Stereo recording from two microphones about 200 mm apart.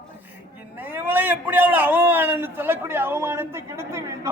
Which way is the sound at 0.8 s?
10° right (ahead or behind).